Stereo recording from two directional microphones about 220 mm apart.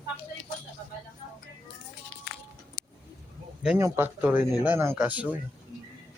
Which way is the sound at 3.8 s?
10° right (ahead or behind).